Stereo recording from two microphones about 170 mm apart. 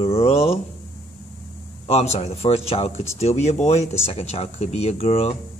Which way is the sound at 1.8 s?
40° left (ahead or behind).